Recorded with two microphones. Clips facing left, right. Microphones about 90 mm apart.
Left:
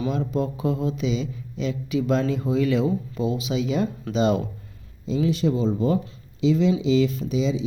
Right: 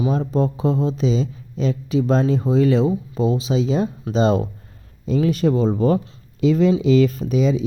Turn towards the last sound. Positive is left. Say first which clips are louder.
# right 5 dB
turn(degrees=-50)  # may be behind; listen again after turning